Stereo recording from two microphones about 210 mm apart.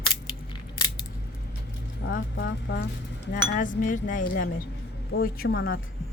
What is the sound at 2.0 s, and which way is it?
Speech, 55° left (ahead or behind).